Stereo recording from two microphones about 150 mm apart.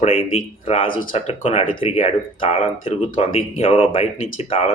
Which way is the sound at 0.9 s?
65° left (ahead or behind).